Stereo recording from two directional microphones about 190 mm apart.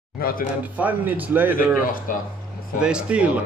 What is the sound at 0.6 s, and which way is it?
Speech, 10° right (ahead or behind).